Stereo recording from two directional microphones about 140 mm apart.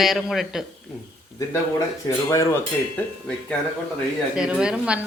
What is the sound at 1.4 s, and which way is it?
Speech, 20° left (ahead or behind).